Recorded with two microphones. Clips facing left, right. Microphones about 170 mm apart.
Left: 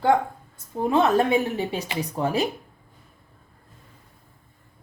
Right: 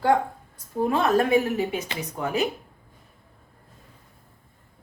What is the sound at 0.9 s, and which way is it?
Speech, 25° left (ahead or behind).